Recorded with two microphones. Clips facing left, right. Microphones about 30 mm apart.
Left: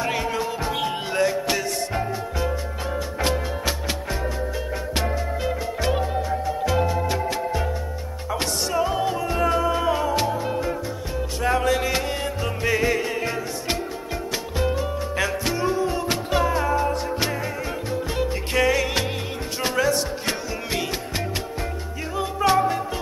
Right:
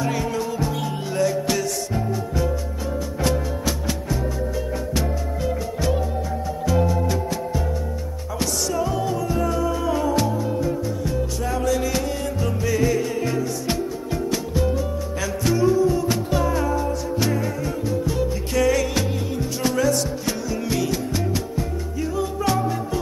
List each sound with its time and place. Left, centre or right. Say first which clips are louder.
0.0 s music: even; left
4.9 s music: even; left
8.4 s music: even; left
9.9 s music: right 2 dB; left
10.2 s music: right 1 dB; left
11.4 s music: left 4 dB; left
11.7 s music: even; left
15.4 s music: right 4 dB; left
15.7 s music: right 4 dB; left
16.4 s music: left 1 dB; left
18.7 s music: right 1 dB; left
22.1 s music: left 4 dB; left